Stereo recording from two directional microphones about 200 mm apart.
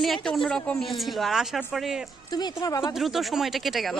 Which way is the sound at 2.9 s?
Centre (ahead or behind).